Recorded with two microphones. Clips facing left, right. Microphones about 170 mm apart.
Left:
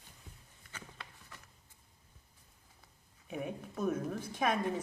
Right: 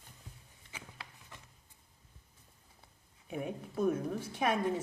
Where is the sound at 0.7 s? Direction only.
10° right (ahead or behind).